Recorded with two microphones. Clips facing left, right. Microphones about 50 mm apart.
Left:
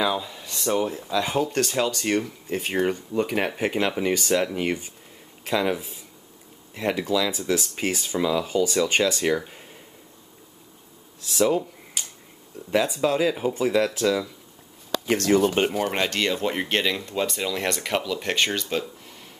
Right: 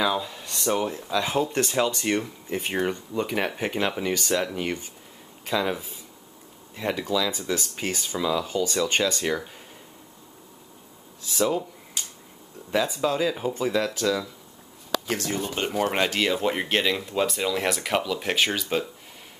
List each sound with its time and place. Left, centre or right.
0.0 s speech: centre
11.2 s a sound: centre
12.7 s speech: centre
15.2 s speech: left
15.7 s speech: centre